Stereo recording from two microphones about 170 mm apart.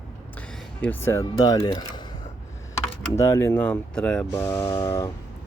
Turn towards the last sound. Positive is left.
turn(degrees=20)  # may be behind; listen again after turning